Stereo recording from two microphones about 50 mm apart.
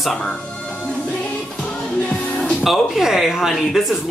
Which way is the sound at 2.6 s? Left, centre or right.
Centre.